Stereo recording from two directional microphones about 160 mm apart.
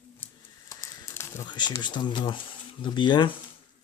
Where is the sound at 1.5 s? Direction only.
30° left (ahead or behind).